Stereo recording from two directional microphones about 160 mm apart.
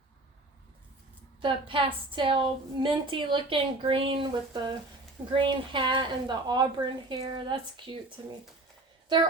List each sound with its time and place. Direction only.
1.4 s a woman's voice: 30° right (ahead or behind)